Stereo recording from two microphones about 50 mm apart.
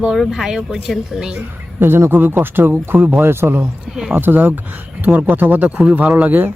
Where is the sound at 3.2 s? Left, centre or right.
Right.